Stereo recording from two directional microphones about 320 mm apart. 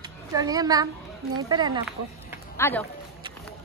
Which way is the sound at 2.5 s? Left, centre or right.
Centre.